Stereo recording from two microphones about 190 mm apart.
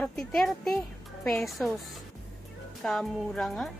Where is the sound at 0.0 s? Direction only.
5° left (ahead or behind).